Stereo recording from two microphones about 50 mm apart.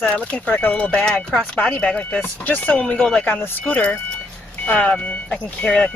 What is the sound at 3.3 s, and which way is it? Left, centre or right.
Speech, left.